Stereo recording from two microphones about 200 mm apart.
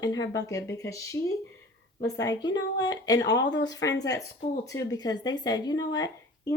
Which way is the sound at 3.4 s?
60° left (ahead or behind).